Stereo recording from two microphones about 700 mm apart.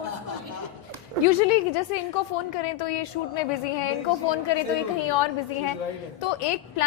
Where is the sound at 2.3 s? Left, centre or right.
Left.